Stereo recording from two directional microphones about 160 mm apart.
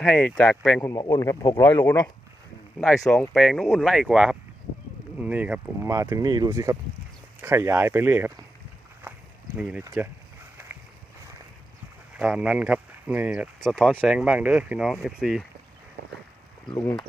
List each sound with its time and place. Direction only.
0.0 s speech: 10° left (ahead or behind)
0.8 s speech: 20° left (ahead or behind); by 8.3 s 15° right (ahead or behind)
9.6 s speech: 5° right (ahead or behind)
12.1 s speech: 5° right (ahead or behind)
13.6 s speech: centre (ahead or behind)
16.6 s speech: 25° left (ahead or behind)